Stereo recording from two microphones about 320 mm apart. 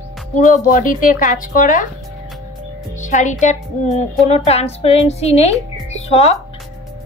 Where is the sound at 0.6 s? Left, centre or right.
Left.